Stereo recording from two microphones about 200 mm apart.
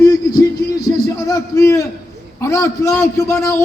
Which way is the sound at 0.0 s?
15° left (ahead or behind).